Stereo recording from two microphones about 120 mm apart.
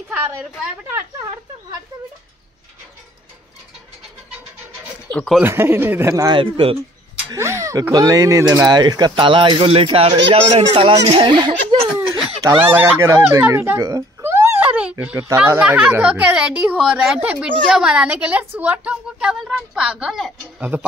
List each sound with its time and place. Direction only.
5.1 s speech: 5° left (ahead or behind)
5.4 s speech: 20° right (ahead or behind)
6.3 s speech: 45° right (ahead or behind)
7.3 s a sound: 25° right (ahead or behind)
7.9 s speech: 30° right (ahead or behind)
12.4 s speech: 15° right (ahead or behind)
13.5 s a sound: 25° right (ahead or behind)
15.3 s a woman's voice: 10° right (ahead or behind)
20.5 s a woman's voice: 15° right (ahead or behind)